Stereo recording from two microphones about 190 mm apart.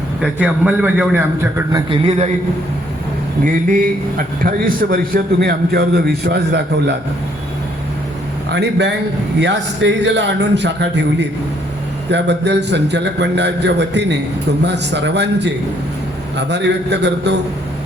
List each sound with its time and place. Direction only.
0.2 s a man's voice: 5° right (ahead or behind)
1.9 s a man's voice: 35° right (ahead or behind)
3.4 s a man's voice: 45° right (ahead or behind)
8.4 s a man's voice: 65° right (ahead or behind)